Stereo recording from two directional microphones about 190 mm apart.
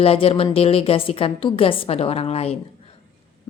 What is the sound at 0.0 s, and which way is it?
A woman's voice, 30° left (ahead or behind).